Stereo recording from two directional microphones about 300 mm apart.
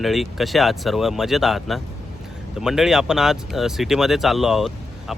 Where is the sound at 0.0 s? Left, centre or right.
Centre.